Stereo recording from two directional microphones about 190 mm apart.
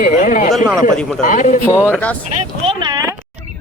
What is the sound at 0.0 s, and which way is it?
Speech, 45° left (ahead or behind).